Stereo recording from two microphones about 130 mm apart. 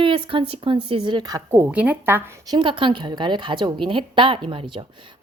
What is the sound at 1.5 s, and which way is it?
Speech, 15° right (ahead or behind).